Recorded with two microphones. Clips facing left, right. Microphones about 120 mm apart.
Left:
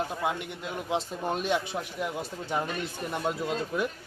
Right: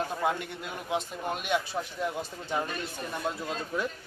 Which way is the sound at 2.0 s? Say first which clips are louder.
Even; 10° left (ahead or behind).